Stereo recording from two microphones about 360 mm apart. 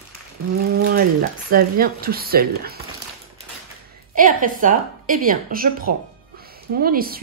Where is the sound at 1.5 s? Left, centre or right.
Right.